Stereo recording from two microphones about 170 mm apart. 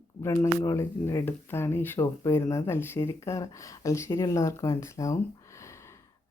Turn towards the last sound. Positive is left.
turn(degrees=15)  # may be behind; listen again after turning